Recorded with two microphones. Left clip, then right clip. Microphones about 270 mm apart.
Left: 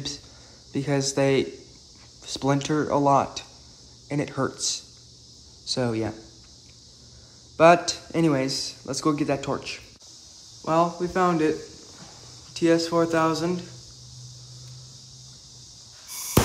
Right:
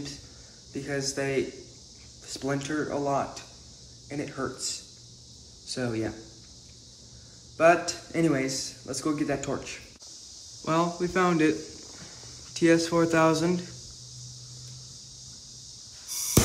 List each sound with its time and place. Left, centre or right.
0.7 s speech: centre
7.5 s a man's voice: centre